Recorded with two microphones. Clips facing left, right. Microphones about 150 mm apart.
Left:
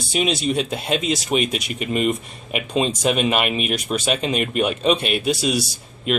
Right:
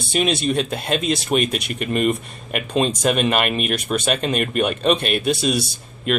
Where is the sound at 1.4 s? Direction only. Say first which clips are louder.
Right 1 dB; 55° right (ahead or behind).